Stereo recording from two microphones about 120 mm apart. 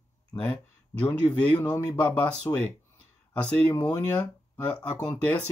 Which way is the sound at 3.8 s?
10° left (ahead or behind).